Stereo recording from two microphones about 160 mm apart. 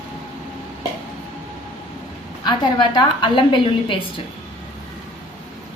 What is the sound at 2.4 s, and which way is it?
A woman's voice, 25° left (ahead or behind).